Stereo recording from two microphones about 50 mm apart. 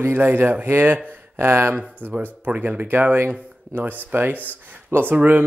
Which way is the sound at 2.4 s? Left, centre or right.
Right.